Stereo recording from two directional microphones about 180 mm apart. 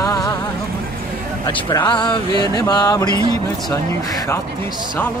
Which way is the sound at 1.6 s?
25° left (ahead or behind).